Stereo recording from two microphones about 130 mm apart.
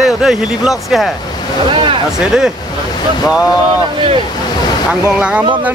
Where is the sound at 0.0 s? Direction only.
5° right (ahead or behind).